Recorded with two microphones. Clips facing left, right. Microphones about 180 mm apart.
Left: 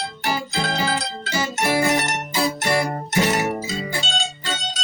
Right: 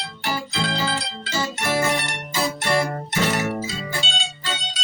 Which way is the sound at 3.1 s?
15° left (ahead or behind).